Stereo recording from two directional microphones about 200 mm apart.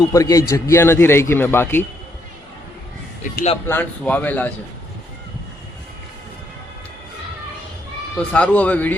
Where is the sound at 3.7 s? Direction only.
10° left (ahead or behind).